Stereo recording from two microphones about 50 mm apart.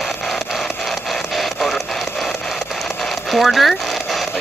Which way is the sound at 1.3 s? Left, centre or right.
Centre.